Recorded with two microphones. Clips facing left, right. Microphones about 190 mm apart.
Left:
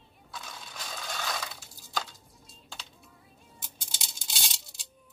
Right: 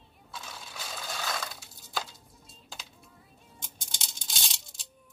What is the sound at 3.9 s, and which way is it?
Coin, 5° left (ahead or behind).